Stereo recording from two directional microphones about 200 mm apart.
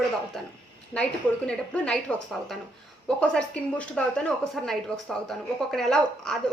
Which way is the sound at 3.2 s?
5° left (ahead or behind).